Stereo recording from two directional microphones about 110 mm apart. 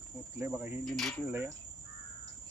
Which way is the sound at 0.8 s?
5° left (ahead or behind).